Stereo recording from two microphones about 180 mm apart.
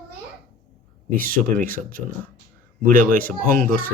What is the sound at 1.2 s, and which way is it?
Speech, 50° right (ahead or behind).